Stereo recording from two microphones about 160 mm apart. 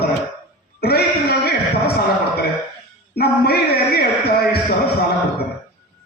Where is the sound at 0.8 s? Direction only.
80° left.